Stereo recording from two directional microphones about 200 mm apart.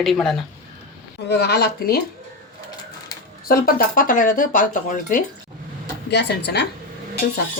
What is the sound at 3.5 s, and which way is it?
Speech, 45° left (ahead or behind).